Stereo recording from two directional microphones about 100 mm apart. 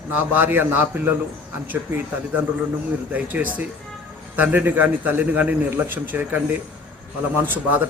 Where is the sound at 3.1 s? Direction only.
15° right (ahead or behind).